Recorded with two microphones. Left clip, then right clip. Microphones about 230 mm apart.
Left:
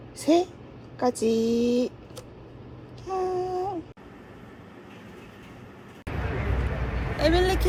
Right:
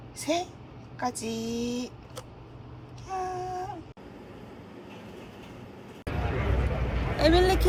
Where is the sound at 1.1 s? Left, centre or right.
Right.